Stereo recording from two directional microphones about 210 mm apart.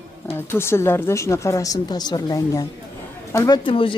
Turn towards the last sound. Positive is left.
turn(degrees=25)  # may be behind; listen again after turning